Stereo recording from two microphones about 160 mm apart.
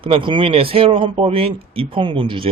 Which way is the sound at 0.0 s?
30° right (ahead or behind).